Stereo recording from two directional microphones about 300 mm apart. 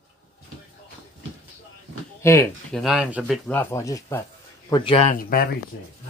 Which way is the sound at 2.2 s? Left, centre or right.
Centre.